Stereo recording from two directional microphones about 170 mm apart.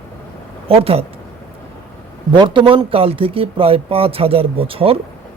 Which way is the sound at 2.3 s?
30° right (ahead or behind).